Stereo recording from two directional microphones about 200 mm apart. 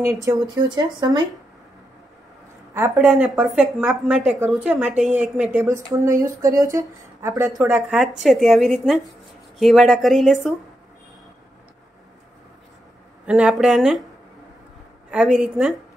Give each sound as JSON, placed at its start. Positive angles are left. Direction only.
{"t": 0.0, "sound": "speech", "side_deg": -15}
{"t": 2.7, "sound": "a woman's voice", "side_deg": -15}
{"t": 7.4, "sound": "a woman's voice", "side_deg": 0}
{"t": 13.2, "sound": "a woman's voice", "side_deg": -5}
{"t": 15.0, "sound": "a woman's voice", "side_deg": -5}